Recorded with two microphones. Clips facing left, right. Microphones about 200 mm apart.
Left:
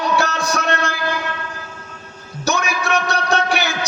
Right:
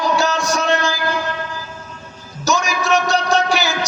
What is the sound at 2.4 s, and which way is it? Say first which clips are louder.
Music: right 2 dB; 60° left (ahead or behind).